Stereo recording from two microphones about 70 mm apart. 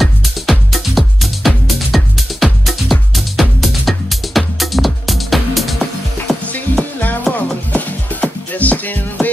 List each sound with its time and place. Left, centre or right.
0.0 s music: centre
6.8 s music: left